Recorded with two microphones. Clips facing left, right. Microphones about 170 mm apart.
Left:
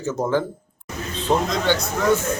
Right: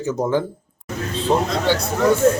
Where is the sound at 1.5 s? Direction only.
5° right (ahead or behind).